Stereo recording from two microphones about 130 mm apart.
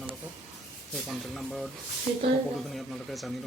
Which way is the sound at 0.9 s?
Centre (ahead or behind).